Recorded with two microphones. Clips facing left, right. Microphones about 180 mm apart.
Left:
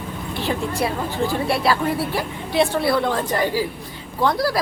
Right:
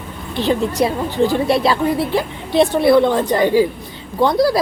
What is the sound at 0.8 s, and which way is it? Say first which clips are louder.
A woman's voice: right 6 dB; 25° right (ahead or behind).